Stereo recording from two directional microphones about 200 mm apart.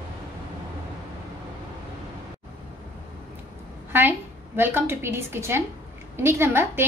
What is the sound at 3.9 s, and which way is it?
A woman's voice, 10° right (ahead or behind).